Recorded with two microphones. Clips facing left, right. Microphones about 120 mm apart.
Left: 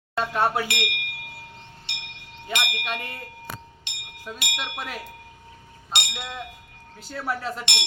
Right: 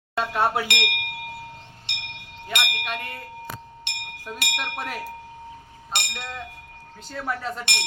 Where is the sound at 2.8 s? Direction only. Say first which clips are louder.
Even; centre (ahead or behind).